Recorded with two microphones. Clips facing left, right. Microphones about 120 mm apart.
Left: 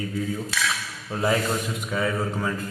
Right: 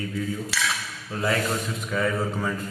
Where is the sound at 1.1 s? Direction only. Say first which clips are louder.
Left 2 dB; 30° left (ahead or behind).